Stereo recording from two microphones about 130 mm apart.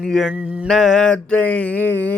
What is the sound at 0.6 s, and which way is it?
Mantra, 5° left (ahead or behind).